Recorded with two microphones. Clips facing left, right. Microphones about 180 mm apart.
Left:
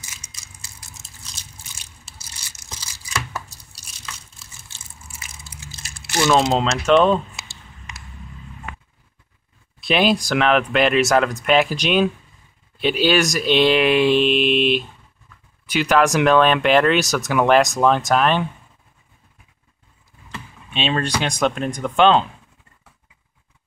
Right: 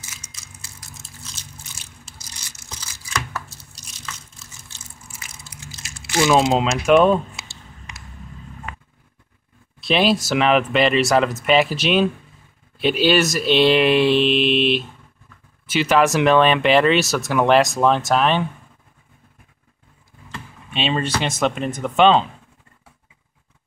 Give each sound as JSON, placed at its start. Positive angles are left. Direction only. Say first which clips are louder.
{"t": 0.2, "sound": "crushing", "louder": "right 2 dB", "side_deg": 15}
{"t": 3.3, "sound": "a sound", "louder": "even", "side_deg": 15}
{"t": 6.2, "sound": "speech", "louder": "right 1 dB", "side_deg": -10}
{"t": 9.8, "sound": "speech", "louder": "even", "side_deg": 0}
{"t": 15.7, "sound": "speech", "louder": "even", "side_deg": 0}
{"t": 20.3, "sound": "computer keyboard", "louder": "even", "side_deg": 0}
{"t": 21.2, "sound": "speech", "louder": "even", "side_deg": 0}